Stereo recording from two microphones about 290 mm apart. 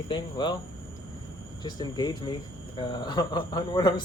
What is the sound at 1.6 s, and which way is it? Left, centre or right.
Speech, centre.